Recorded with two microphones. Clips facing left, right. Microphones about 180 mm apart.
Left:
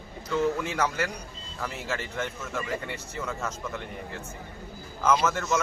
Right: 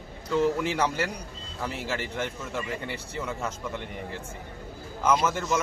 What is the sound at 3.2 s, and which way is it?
Speech, 15° right (ahead or behind).